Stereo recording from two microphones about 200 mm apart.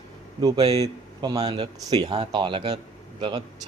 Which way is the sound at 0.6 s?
30° right (ahead or behind).